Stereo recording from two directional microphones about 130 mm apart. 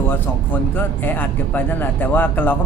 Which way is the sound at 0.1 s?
15° left (ahead or behind).